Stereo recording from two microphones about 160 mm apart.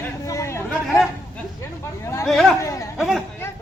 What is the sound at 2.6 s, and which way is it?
Chatter, 20° left (ahead or behind).